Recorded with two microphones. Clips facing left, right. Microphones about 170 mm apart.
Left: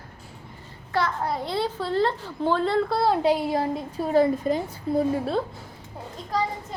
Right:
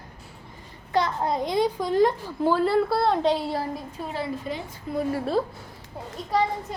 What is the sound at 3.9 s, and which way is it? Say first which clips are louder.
Speech: left 14 dB; 40° left (ahead or behind).